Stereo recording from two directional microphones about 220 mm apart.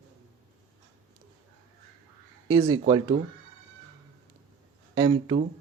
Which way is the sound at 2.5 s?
15° right (ahead or behind).